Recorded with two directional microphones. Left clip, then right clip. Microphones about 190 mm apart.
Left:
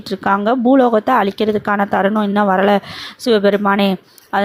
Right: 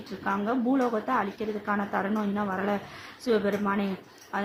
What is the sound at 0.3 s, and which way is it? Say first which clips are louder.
A woman's voice: left 14 dB; 45° left (ahead or behind).